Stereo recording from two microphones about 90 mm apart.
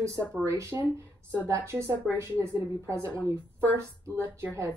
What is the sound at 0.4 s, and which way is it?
A woman's voice, 30° right (ahead or behind).